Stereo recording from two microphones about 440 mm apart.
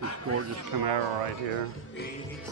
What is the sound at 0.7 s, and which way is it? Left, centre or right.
Speech, right.